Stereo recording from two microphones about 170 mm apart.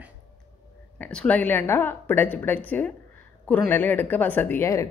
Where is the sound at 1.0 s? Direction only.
5° left (ahead or behind).